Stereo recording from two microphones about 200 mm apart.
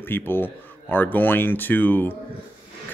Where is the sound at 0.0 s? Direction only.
10° left (ahead or behind).